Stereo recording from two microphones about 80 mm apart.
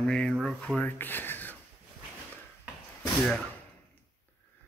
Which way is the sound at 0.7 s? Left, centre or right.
Left.